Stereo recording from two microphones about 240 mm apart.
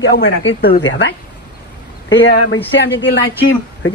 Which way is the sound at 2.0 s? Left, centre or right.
Left.